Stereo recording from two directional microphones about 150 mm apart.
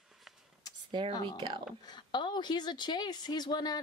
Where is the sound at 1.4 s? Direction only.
30° right (ahead or behind).